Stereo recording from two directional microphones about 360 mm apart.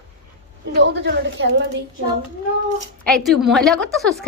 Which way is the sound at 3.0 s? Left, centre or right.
Centre.